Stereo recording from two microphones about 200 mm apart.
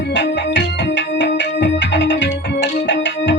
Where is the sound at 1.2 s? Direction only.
60° left (ahead or behind).